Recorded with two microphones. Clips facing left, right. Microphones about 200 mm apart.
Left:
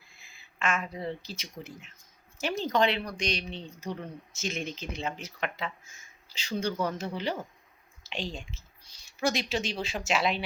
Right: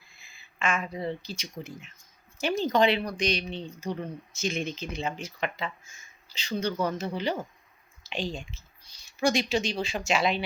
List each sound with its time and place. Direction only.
0.2 s speech: centre (ahead or behind)